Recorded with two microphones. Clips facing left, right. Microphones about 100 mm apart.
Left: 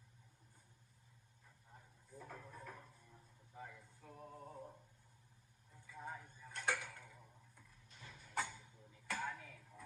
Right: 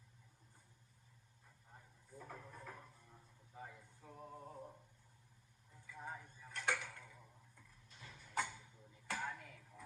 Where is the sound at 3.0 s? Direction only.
20° right (ahead or behind).